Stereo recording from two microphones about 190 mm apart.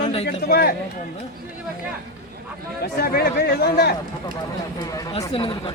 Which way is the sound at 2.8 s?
55° left (ahead or behind).